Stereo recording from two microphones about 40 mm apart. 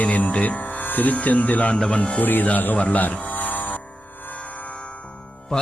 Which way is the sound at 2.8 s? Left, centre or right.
Left.